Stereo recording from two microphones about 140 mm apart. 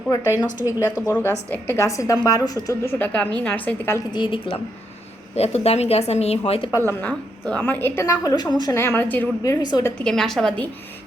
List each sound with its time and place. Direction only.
0.1 s a woman's voice: 25° left (ahead or behind)
4.1 s a woman's voice: 35° left (ahead or behind)
5.3 s a woman's voice: 50° left (ahead or behind)
6.7 s a woman's voice: 20° left (ahead or behind)
7.0 s a woman's voice: 5° left (ahead or behind); by 8.8 s 30° left (ahead or behind)
8.8 s a woman's voice: 15° left (ahead or behind)
9.4 s a woman's voice: 25° left (ahead or behind)
10.0 s a woman's voice: 5° left (ahead or behind)